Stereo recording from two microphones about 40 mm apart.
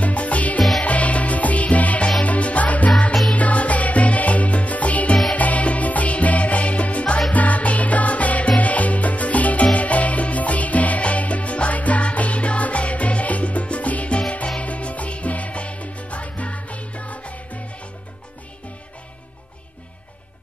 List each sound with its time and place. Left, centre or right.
0.0 s music: left